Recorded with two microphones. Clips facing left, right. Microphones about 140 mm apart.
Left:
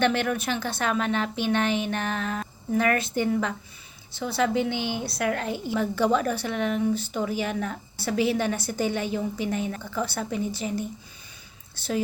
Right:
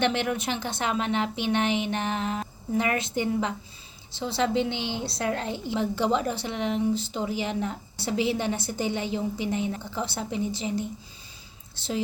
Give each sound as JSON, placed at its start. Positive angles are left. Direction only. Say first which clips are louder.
{"t": 0.0, "sound": "a woman's voice", "louder": "left 2 dB", "side_deg": -20}